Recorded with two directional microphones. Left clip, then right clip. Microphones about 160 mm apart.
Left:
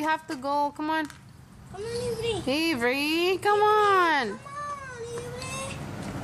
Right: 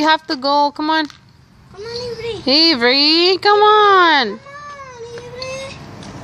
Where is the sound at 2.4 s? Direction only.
45° right (ahead or behind).